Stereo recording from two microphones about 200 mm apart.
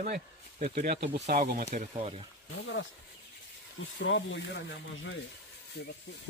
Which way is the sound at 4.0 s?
65° left (ahead or behind).